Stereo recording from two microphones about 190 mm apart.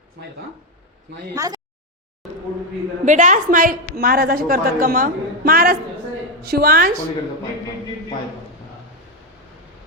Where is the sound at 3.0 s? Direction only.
40° right (ahead or behind).